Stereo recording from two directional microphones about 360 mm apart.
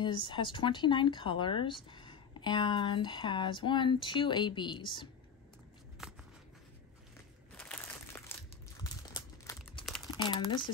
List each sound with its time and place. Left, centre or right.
0.0 s speech: centre
6.0 s a sound: centre
7.5 s crumpling: centre